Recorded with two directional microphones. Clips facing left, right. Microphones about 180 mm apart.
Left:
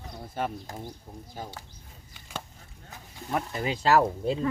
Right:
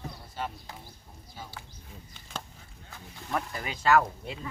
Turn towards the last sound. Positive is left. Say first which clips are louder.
# left 2 dB
turn(degrees=35)  # may be behind; listen again after turning